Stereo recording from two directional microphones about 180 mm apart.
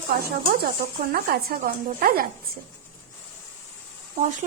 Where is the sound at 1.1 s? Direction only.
55° right (ahead or behind).